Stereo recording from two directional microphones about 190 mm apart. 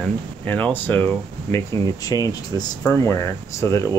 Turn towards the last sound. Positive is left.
turn(degrees=15)  # may be behind; listen again after turning